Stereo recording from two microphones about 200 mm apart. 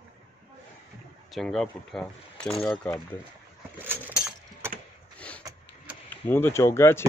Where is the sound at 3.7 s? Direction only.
10° right (ahead or behind).